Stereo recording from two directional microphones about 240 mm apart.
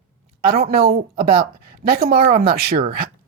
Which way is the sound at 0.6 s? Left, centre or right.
Right.